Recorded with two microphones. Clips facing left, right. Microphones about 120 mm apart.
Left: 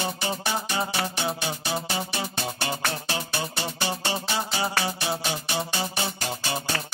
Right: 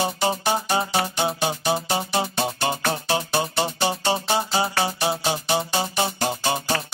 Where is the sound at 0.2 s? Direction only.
30° right (ahead or behind).